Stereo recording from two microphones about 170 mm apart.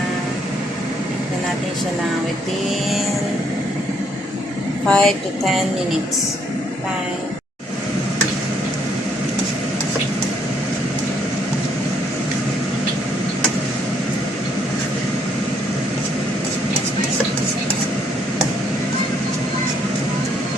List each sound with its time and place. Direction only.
4.9 s a woman's voice: 5° left (ahead or behind)